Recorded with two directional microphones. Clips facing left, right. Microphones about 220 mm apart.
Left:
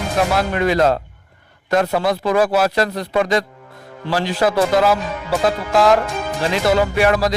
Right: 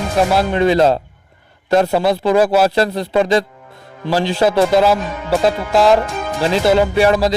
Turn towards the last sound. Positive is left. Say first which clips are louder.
# right 3 dB
turn(degrees=-25)  # may be behind; listen again after turning